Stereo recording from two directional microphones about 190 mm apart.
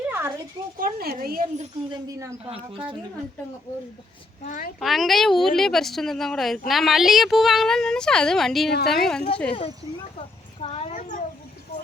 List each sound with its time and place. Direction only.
0.1 s a sound: 10° right (ahead or behind)
0.8 s speech: 55° right (ahead or behind)
1.9 s speech: 15° right (ahead or behind)
4.4 s speech: 40° left (ahead or behind)
4.8 s a woman's voice: centre (ahead or behind)
9.5 s speech: 30° left (ahead or behind)